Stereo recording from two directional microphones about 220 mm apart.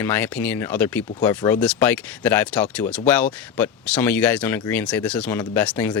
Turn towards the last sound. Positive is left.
turn(degrees=5)  # may be behind; listen again after turning